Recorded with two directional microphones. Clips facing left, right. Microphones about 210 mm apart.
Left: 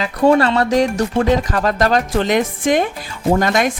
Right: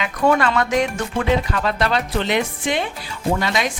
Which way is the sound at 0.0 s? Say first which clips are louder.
Left 5 dB; 35° left (ahead or behind).